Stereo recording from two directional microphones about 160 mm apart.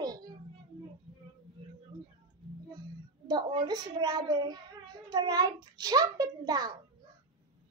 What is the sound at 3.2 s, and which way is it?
A child's voice, 25° right (ahead or behind).